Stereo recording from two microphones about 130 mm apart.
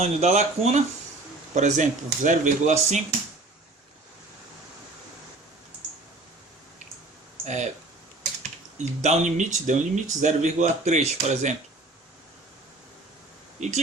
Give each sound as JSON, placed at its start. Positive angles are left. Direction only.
{"t": 0.0, "sound": "speech", "side_deg": -60}
{"t": 1.5, "sound": "speech", "side_deg": -70}
{"t": 7.4, "sound": "speech", "side_deg": -65}
{"t": 9.0, "sound": "speech", "side_deg": -60}
{"t": 13.6, "sound": "speech", "side_deg": -65}